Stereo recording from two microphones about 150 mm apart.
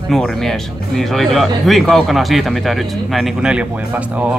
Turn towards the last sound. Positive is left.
turn(degrees=-10)  # may be behind; listen again after turning